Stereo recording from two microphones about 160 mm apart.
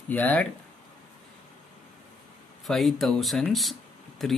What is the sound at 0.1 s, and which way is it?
Speech, 10° left (ahead or behind).